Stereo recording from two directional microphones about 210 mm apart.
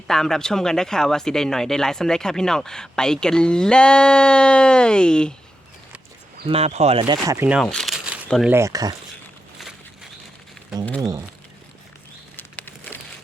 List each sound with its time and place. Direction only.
0.1 s speech: centre (ahead or behind)
6.5 s speech: 30° right (ahead or behind); by 8.5 s centre (ahead or behind)
8.5 s speech: 15° right (ahead or behind)
9.6 s a sound: centre (ahead or behind)
11.0 s speech: 15° right (ahead or behind)
12.4 s a sound: 10° left (ahead or behind)